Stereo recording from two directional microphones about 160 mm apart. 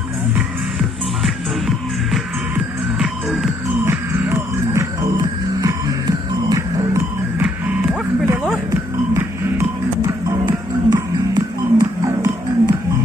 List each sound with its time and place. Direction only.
2.5 s music: 5° right (ahead or behind)
3.8 s music: 15° right (ahead or behind)
7.4 s music: 5° right (ahead or behind)
9.1 s music: 20° right (ahead or behind)